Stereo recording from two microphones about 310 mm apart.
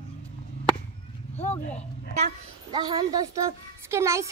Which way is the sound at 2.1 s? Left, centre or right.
Centre.